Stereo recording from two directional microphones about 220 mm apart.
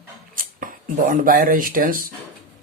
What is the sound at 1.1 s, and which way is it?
Speech, 40° right (ahead or behind).